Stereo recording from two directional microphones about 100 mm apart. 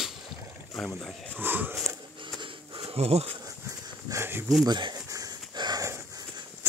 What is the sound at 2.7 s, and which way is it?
Insect, 85° right.